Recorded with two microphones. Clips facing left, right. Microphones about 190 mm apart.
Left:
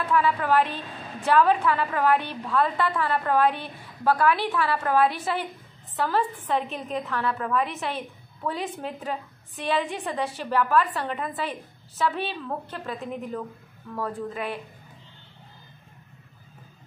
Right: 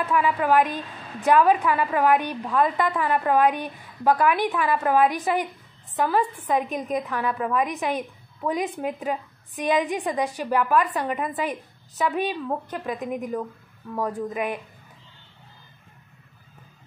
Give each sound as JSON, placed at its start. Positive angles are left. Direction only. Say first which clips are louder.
{"t": 0.1, "sound": "a woman's voice", "louder": "right 1 dB", "side_deg": -15}